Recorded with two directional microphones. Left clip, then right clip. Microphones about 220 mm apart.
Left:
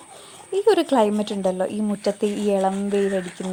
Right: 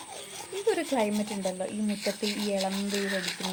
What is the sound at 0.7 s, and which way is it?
Speech, 30° left (ahead or behind).